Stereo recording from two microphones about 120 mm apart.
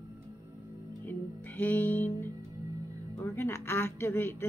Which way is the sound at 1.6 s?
15° left (ahead or behind).